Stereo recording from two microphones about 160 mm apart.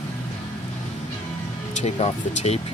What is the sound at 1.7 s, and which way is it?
Speech, 45° left (ahead or behind).